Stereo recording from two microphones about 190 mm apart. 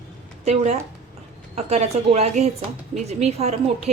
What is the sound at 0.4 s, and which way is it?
A woman's voice, 35° right (ahead or behind).